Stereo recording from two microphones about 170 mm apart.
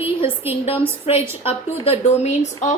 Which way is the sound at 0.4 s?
10° right (ahead or behind).